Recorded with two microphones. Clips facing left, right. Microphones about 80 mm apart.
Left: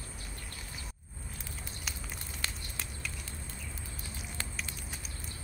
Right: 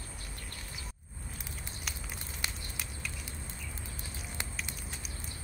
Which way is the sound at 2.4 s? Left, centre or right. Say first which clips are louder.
Even; centre.